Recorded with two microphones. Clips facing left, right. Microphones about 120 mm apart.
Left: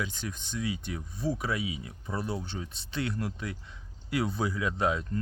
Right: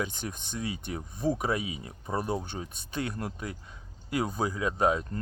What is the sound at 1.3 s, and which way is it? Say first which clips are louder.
Speech: right 3 dB; 45° right (ahead or behind).